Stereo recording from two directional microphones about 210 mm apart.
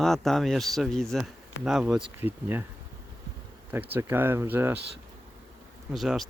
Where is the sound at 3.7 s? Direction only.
10° right (ahead or behind).